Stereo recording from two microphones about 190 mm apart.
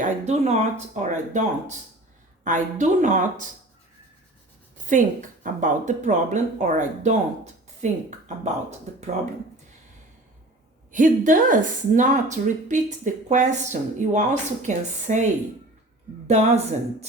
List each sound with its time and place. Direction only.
0.0 s a woman's voice: 35° right (ahead or behind)
4.9 s a woman's voice: 40° right (ahead or behind)
10.9 s a woman's voice: 45° right (ahead or behind)